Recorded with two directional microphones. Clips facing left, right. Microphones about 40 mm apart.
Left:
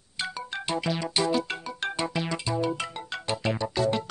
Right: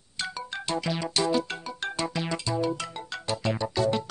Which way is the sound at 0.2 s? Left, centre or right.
Centre.